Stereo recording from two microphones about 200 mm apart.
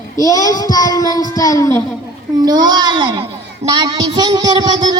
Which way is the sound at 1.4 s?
15° left (ahead or behind).